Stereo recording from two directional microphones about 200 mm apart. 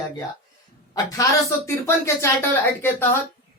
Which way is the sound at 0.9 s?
15° left (ahead or behind).